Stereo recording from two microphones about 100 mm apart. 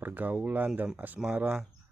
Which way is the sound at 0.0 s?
15° right (ahead or behind).